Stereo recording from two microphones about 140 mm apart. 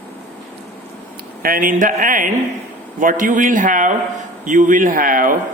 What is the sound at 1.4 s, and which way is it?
A man's voice, 85° right.